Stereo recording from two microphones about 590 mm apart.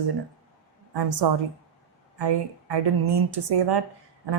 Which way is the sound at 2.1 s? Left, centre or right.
Right.